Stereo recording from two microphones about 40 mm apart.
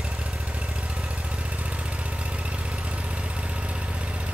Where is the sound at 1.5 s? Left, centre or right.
Right.